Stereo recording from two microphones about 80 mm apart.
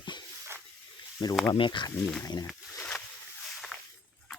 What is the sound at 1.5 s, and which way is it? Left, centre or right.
Speech, left.